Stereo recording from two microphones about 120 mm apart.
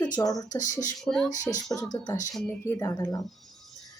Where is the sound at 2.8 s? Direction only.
30° left (ahead or behind).